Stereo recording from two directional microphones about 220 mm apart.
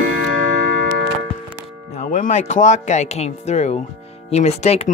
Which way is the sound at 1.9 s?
35° left (ahead or behind).